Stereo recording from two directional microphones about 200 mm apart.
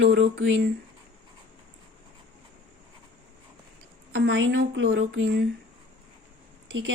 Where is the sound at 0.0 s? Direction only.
60° right (ahead or behind).